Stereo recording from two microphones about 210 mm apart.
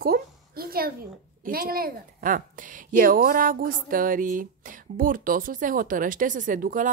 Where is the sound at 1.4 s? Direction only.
45° right (ahead or behind).